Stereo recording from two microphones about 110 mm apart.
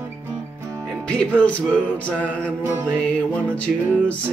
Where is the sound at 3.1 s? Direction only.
10° left (ahead or behind).